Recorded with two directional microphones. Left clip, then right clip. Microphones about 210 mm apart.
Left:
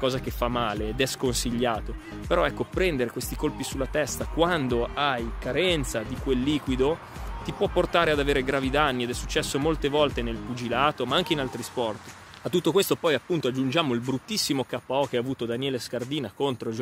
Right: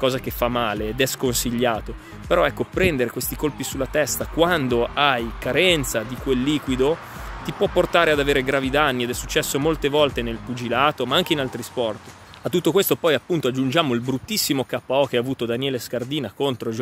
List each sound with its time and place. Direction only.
0.0 s speech: 5° right (ahead or behind)